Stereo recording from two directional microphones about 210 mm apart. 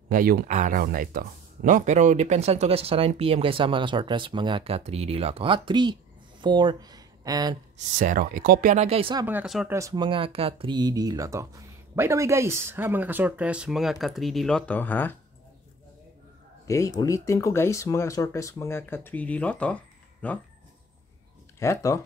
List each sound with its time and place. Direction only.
0.1 s speech: 45° right (ahead or behind); by 7.5 s 15° right (ahead or behind)
7.7 s speech: 40° right (ahead or behind)
9.2 s speech: 5° right (ahead or behind)
9.8 s speech: 20° right (ahead or behind); by 15.1 s 10° left (ahead or behind)
16.6 s speech: 15° left (ahead or behind)
21.5 s speech: 15° left (ahead or behind)